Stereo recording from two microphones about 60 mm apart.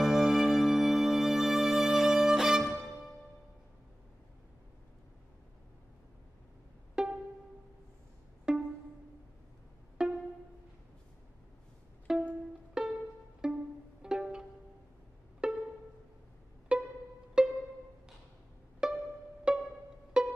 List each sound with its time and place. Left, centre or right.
0.0 s music: centre
7.0 s music: centre
8.5 s pizzicato: centre
10.0 s pizzicato: centre
12.1 s music: centre
13.4 s pizzicato: centre
14.0 s music: centre
15.4 s pizzicato: centre
16.7 s pizzicato: centre
17.4 s music: centre
18.8 s pizzicato: centre
19.5 s music: centre